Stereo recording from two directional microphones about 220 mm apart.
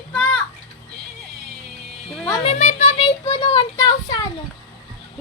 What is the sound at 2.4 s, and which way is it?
Music, 30° left (ahead or behind).